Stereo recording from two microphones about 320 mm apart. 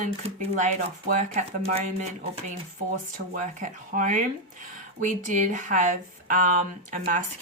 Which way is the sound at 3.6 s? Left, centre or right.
Right.